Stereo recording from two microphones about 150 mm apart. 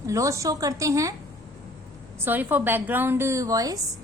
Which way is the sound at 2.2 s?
10° right (ahead or behind).